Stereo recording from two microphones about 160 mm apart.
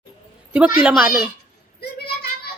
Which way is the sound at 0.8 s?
5° right (ahead or behind).